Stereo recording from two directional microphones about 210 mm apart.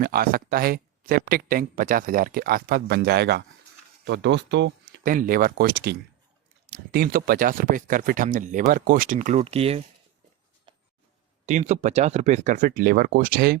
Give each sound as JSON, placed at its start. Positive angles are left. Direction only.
{"t": 0.0, "sound": "speech", "side_deg": -45}
{"t": 10.7, "sound": "a sound", "side_deg": -20}
{"t": 11.4, "sound": "speech", "side_deg": -35}